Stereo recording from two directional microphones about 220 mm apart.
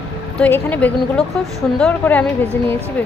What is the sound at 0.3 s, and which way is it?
A woman's voice, 5° left (ahead or behind).